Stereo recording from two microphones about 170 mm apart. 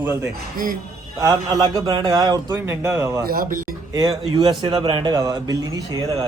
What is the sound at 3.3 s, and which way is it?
Speech, 55° right (ahead or behind).